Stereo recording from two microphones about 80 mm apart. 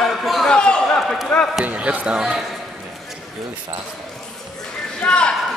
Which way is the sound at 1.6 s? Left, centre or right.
Centre.